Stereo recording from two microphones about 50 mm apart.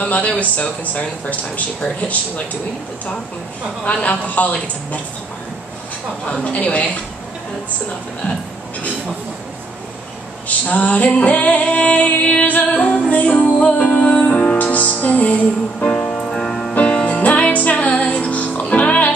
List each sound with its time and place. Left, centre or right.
0.0 s female singing: left
3.8 s female singing: left
6.5 s female singing: left
10.7 s female singing: left
14.1 s music: centre
15.9 s music: centre
16.7 s music: left